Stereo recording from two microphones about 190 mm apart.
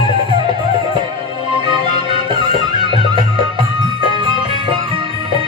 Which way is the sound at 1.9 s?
25° right (ahead or behind).